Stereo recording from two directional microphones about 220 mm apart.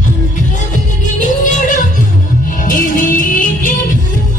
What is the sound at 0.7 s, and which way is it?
Music, 35° left (ahead or behind).